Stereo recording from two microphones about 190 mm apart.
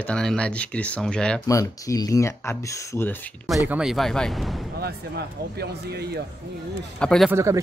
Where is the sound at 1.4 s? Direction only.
15° left (ahead or behind).